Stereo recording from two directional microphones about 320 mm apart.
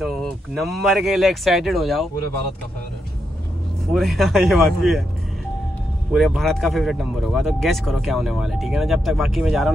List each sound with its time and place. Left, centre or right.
0.0 s speech: centre
3.9 s speech: centre
6.1 s speech: centre